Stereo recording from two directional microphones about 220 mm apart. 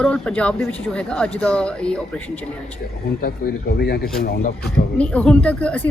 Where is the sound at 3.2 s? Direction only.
45° left (ahead or behind).